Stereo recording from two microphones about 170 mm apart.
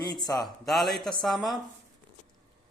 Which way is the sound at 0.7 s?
Centre (ahead or behind).